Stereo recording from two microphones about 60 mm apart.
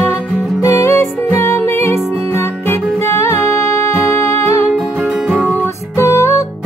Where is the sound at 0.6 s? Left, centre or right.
Left.